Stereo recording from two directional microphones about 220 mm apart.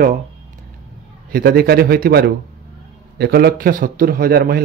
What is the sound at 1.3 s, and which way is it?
A man's voice, 45° right (ahead or behind).